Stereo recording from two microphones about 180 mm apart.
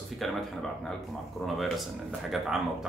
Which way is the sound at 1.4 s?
Centre (ahead or behind).